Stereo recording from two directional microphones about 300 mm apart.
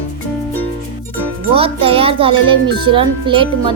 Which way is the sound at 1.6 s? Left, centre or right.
Centre.